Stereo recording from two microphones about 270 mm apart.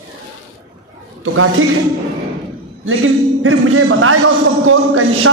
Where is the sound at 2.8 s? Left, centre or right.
Right.